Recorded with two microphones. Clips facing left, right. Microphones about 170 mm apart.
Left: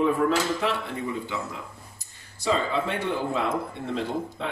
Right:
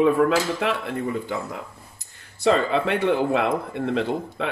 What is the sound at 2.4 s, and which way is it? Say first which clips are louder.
Speech: right 5 dB; 70° right (ahead or behind).